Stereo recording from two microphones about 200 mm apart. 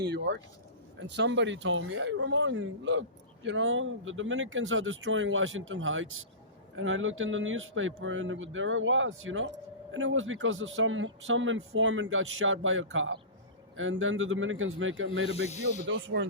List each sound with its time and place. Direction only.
0.0 s speech: 60° right (ahead or behind); by 15.3 s 80° right
15.4 s snake: 35° left (ahead or behind)
15.9 s speech: 70° right (ahead or behind)